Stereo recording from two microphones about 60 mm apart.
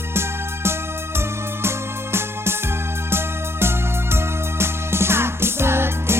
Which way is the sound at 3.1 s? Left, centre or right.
Right.